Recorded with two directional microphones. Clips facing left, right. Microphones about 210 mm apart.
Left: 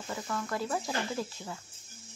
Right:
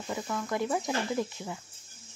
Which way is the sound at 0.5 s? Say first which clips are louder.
Right 5 dB; 20° right (ahead or behind).